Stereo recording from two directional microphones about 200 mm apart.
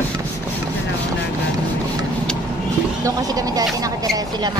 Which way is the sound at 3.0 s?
15° right (ahead or behind).